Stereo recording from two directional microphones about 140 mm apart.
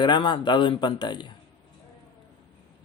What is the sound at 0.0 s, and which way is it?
Speech, 35° left (ahead or behind).